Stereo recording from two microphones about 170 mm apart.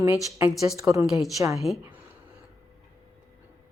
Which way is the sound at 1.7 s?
Centre (ahead or behind).